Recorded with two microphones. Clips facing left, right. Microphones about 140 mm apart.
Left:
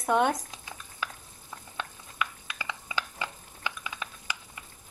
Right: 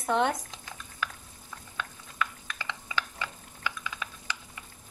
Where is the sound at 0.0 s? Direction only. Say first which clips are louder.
Left 2 dB; 15° left (ahead or behind).